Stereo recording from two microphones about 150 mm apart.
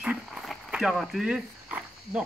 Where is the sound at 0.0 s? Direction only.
5° right (ahead or behind).